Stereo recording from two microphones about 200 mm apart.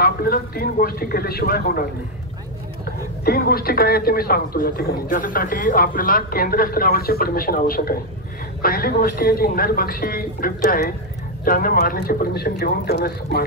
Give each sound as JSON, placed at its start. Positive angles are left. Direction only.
{"t": 0.0, "sound": "speech", "side_deg": 50}
{"t": 3.3, "sound": "speech", "side_deg": 50}